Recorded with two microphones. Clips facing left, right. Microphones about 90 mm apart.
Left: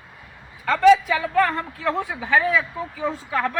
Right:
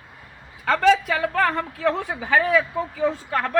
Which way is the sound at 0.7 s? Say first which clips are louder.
Left 2 dB; 80° right.